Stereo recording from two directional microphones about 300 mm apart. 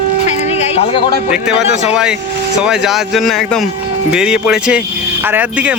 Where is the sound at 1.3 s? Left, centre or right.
Centre.